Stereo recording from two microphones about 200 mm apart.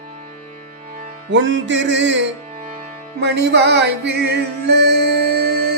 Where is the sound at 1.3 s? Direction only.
65° right (ahead or behind).